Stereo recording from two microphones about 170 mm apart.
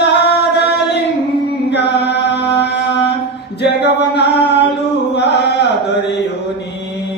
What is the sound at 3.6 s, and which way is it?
Singing, 80° left.